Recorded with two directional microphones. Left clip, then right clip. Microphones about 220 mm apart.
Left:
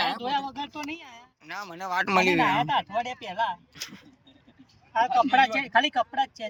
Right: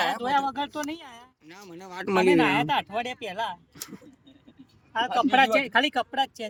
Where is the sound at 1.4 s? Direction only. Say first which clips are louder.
Left 12 dB; 5° right (ahead or behind); by 6.5 s 25° right (ahead or behind).